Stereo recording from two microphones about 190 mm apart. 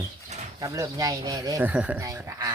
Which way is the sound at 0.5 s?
20° right (ahead or behind).